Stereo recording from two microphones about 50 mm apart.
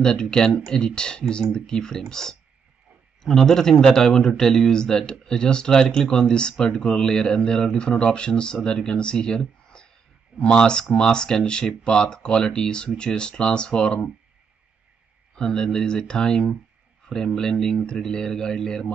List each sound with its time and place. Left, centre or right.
0.0 s a man's voice: centre
15.3 s a man's voice: centre